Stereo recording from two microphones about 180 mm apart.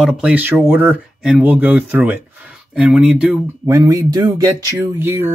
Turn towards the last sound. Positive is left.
turn(degrees=-15)  # may be behind; listen again after turning